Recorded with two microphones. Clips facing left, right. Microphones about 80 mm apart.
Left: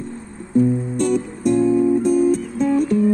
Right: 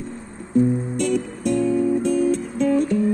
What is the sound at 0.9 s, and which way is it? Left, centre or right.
Music, left.